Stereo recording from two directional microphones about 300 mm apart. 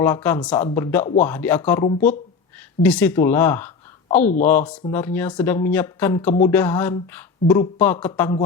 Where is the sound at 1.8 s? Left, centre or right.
Left.